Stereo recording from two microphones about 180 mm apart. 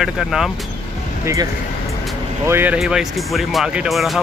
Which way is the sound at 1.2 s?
15° right (ahead or behind).